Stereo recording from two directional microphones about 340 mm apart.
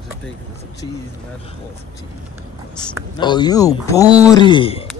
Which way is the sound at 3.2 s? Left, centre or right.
Centre.